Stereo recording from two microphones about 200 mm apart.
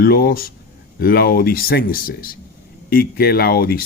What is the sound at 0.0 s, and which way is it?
Speech, 50° left (ahead or behind).